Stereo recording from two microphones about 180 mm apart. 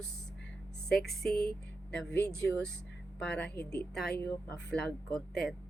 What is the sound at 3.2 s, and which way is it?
Speech, 5° left (ahead or behind).